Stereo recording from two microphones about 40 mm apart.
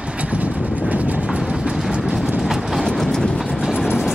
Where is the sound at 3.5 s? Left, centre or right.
Centre.